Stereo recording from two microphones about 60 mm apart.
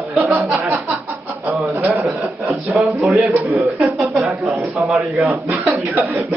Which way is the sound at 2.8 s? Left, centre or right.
Centre.